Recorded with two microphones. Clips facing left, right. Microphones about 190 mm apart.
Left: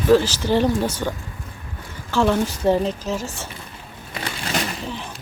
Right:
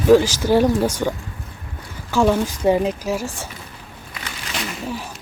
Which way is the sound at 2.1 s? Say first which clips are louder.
Right 2 dB; 10° right (ahead or behind).